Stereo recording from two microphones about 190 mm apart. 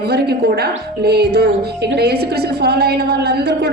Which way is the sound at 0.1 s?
55° right (ahead or behind).